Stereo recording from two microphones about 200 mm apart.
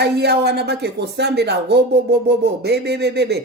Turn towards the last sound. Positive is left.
turn(degrees=-55)  # may be behind; listen again after turning